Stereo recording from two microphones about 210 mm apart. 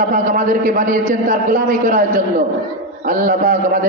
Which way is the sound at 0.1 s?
40° right (ahead or behind).